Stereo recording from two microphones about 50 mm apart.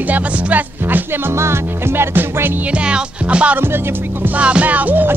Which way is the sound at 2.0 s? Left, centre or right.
Right.